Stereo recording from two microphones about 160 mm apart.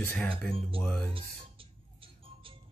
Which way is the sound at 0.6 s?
35° right (ahead or behind).